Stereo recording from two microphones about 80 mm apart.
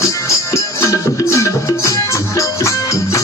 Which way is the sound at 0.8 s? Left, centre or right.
Left.